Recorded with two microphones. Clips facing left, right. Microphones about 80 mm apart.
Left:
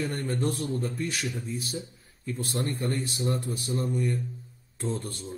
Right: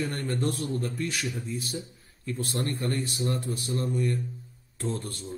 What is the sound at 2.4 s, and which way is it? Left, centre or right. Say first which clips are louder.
Speech: even; centre.